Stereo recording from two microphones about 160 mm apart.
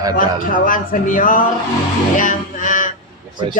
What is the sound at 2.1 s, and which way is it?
Music, 55° left (ahead or behind).